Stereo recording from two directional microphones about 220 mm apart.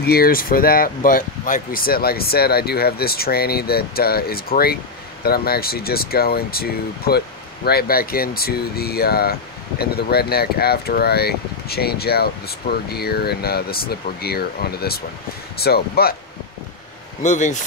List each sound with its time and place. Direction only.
0.0 s speech: 45° left (ahead or behind)
17.2 s speech: 35° left (ahead or behind)